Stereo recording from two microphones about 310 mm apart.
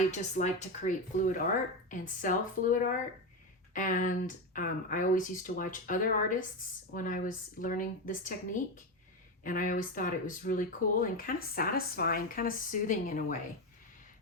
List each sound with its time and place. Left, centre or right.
0.1 s speech: left
9.4 s speech: left